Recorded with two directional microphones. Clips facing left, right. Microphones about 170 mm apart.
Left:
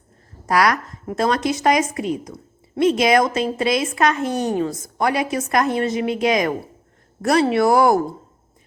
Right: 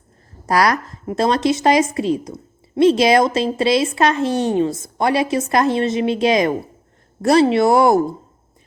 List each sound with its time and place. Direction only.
0.4 s a woman's voice: 35° right (ahead or behind)